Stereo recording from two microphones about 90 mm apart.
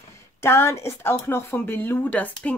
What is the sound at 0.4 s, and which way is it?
Speech, 30° left (ahead or behind).